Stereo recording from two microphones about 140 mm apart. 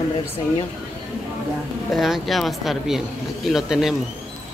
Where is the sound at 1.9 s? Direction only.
Centre (ahead or behind).